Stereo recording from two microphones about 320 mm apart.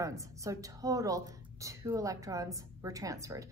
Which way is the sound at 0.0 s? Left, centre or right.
Centre.